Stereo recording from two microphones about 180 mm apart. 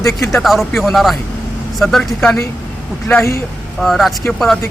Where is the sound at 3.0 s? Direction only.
10° left (ahead or behind).